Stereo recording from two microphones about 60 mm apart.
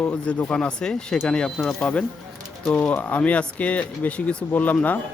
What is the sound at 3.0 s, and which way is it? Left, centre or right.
Speech, left.